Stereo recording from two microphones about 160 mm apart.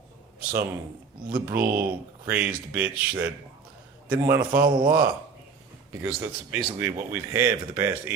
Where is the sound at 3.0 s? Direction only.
10° right (ahead or behind).